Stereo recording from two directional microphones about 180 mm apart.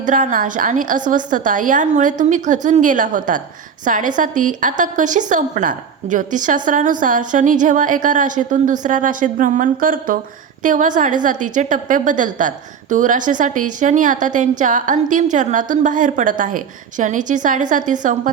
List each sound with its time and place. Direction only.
0.0 s a woman's voice: 45° right (ahead or behind)